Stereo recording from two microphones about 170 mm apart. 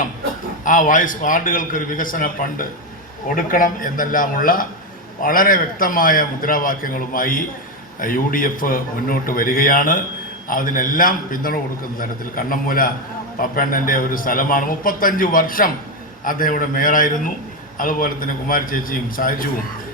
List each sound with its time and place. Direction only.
0.6 s a man's voice: 50° left (ahead or behind)